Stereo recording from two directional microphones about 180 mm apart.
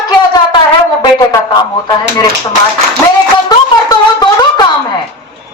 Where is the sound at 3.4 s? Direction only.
20° left (ahead or behind).